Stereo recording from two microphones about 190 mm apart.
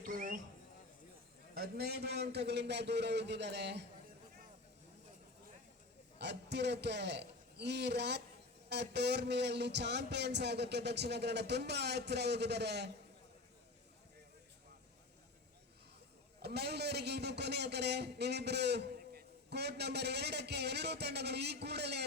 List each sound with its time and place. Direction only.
0.0 s a sound: 45° right (ahead or behind)
1.5 s a man's voice: 55° right (ahead or behind)
6.1 s a man's voice: 65° right (ahead or behind)
16.4 s a man's voice: 60° right (ahead or behind)